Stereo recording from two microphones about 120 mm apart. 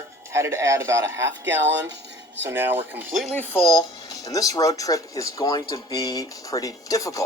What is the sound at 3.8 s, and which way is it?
Speech, 30° left (ahead or behind).